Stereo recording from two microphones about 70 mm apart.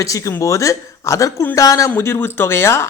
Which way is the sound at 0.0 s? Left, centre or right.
Left.